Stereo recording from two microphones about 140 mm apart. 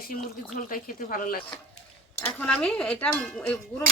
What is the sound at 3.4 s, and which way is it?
Cowbell, 15° left (ahead or behind).